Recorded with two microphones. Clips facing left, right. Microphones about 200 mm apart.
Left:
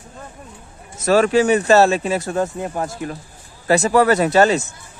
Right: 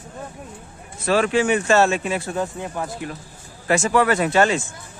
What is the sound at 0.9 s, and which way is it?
Speech, 40° left (ahead or behind).